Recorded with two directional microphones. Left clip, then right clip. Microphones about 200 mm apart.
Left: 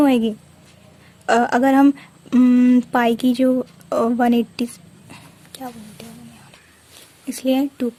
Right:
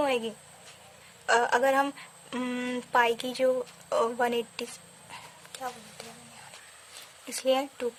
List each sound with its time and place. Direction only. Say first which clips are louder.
0.0 s speech: left 10 dB; 35° left (ahead or behind)
5.1 s a sound: left 3 dB; 20° left (ahead or behind)
7.3 s speech: left 6 dB; 20° left (ahead or behind)